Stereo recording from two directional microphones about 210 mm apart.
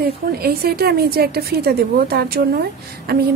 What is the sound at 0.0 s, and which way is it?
A woman's voice, 45° right (ahead or behind).